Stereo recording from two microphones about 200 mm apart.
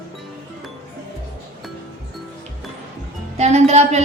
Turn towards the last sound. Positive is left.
turn(degrees=-35)  # may be behind; listen again after turning